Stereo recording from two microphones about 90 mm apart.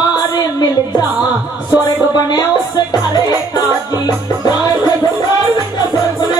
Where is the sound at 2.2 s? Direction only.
50° left (ahead or behind).